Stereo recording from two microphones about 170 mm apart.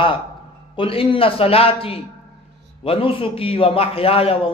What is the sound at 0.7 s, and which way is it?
A man's voice, 30° left (ahead or behind).